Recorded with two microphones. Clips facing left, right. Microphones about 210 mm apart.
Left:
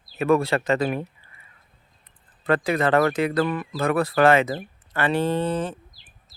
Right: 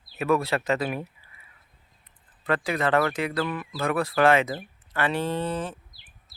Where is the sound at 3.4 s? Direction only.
45° left (ahead or behind).